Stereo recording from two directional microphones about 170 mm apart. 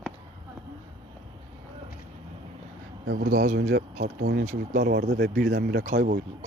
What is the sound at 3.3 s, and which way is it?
Speech, 50° right (ahead or behind).